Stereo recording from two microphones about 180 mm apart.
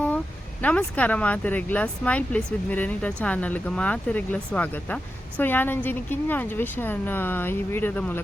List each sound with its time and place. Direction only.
0.6 s speech: 10° left (ahead or behind)